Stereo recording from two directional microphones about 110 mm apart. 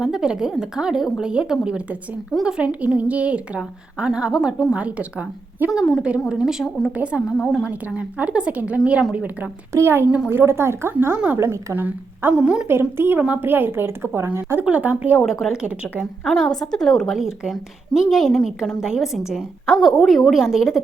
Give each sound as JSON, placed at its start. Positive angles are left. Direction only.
{"t": 0.0, "sound": "a woman's voice", "side_deg": -5}
{"t": 7.4, "sound": "a woman's voice", "side_deg": 0}
{"t": 7.7, "sound": "a woman's voice", "side_deg": -10}
{"t": 12.6, "sound": "a woman's voice", "side_deg": -20}
{"t": 15.2, "sound": "a woman's voice", "side_deg": 0}
{"t": 16.2, "sound": "a woman's voice", "side_deg": 5}